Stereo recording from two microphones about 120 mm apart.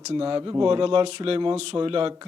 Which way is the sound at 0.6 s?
45° right (ahead or behind).